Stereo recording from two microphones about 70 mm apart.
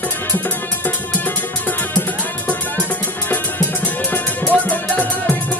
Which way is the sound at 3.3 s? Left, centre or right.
Left.